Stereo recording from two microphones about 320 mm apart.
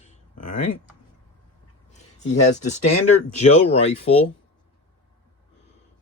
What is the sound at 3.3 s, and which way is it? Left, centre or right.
Speech, left.